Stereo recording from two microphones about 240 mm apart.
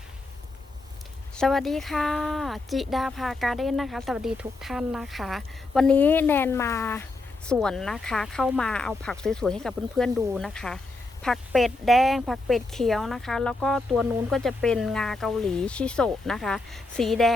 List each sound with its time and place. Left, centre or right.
1.4 s speech: centre